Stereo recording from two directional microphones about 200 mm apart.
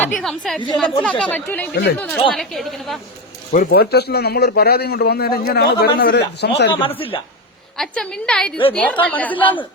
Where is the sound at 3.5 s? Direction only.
45° left (ahead or behind).